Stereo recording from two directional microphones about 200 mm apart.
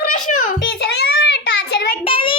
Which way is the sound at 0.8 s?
55° left (ahead or behind).